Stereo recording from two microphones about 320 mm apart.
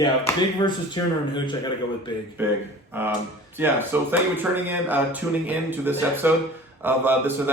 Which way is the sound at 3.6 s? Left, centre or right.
Centre.